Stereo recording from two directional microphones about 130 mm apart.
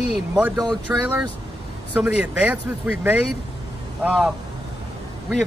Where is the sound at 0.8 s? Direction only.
15° right (ahead or behind).